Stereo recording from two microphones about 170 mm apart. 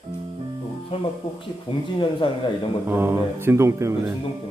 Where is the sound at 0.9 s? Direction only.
30° left (ahead or behind).